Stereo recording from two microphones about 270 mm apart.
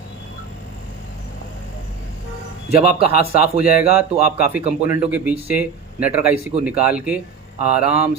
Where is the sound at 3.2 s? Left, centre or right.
Right.